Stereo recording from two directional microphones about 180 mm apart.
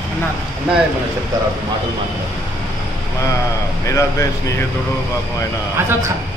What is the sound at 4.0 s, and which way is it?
Speech, 15° left (ahead or behind).